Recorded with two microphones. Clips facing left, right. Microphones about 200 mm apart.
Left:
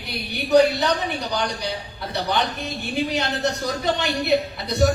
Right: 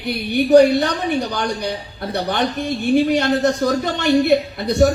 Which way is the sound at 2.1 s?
50° right (ahead or behind).